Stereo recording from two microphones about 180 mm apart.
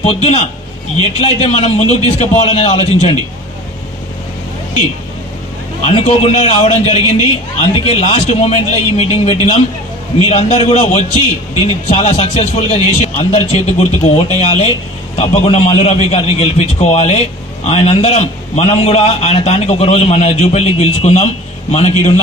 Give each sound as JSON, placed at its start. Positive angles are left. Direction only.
{"t": 0.0, "sound": "a man's voice", "side_deg": 35}
{"t": 5.8, "sound": "a man's voice", "side_deg": 35}